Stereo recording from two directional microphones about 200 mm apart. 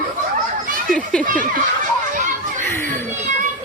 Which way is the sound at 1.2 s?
40° right (ahead or behind).